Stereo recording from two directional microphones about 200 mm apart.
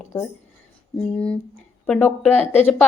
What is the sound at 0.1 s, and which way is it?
A woman's voice, 10° left (ahead or behind).